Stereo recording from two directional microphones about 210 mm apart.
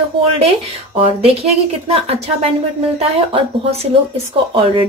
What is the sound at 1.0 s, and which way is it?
Speech, 30° right (ahead or behind).